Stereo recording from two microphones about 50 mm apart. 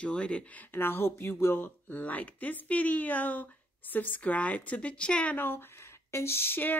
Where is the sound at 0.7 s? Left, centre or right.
Left.